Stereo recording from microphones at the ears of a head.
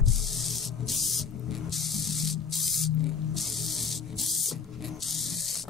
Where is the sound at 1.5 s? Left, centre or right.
Left.